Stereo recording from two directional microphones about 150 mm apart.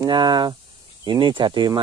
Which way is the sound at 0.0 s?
30° right (ahead or behind).